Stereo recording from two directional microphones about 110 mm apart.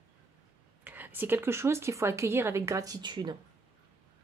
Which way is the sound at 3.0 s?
40° right (ahead or behind).